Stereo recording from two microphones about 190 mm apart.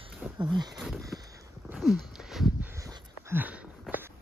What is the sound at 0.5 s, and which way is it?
Speech, 20° right (ahead or behind).